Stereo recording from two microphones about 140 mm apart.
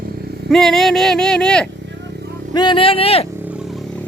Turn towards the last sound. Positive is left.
turn(degrees=5)  # may be behind; listen again after turning